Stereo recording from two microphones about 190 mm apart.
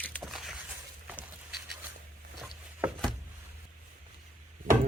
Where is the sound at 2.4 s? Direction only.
Centre (ahead or behind).